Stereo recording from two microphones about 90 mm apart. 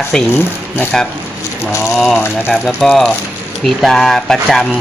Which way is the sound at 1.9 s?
Centre (ahead or behind).